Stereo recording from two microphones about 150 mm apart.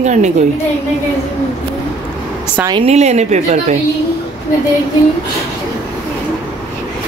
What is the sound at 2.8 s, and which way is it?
Speech, 45° right (ahead or behind).